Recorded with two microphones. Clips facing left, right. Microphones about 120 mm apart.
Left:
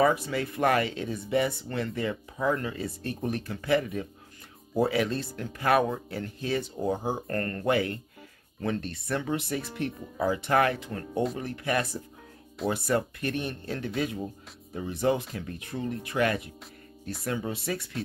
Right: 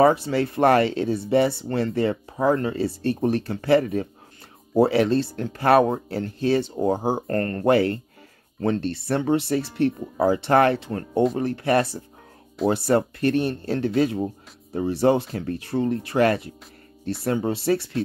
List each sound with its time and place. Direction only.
0.0 s speech: 30° right (ahead or behind)
3.8 s speech: 50° right (ahead or behind)
4.7 s speech: 35° right (ahead or behind)